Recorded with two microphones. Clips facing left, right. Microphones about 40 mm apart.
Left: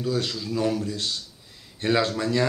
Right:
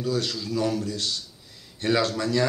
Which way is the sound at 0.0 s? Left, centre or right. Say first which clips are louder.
Even; centre.